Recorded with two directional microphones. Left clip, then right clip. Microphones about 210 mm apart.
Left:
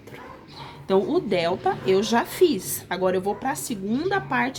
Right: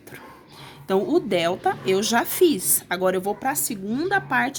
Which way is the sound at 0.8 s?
35° right (ahead or behind).